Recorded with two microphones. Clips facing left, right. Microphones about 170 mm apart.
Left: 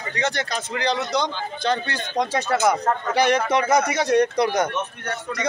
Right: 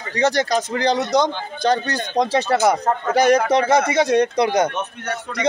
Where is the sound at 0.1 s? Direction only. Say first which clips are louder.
Right 8 dB; 35° right (ahead or behind).